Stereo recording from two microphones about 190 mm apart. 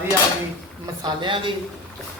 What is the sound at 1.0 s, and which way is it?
Speech, 25° right (ahead or behind).